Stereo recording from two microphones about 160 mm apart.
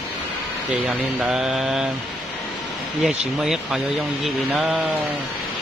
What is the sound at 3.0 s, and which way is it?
Speech, 5° right (ahead or behind).